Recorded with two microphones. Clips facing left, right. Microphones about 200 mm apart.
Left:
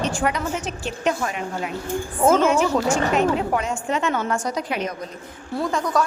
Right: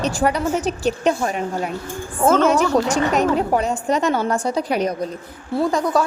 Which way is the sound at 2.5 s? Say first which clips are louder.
Right 2 dB; 40° right (ahead or behind).